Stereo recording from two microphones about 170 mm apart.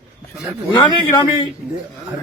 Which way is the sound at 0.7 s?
25° left (ahead or behind).